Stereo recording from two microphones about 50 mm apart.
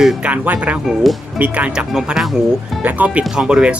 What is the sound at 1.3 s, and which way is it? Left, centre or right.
Speech, right.